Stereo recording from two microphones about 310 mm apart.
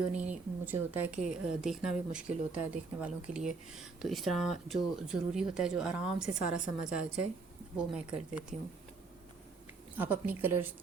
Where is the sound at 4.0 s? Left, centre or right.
Centre.